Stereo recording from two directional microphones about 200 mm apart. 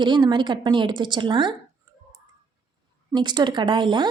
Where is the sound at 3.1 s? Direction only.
20° right (ahead or behind).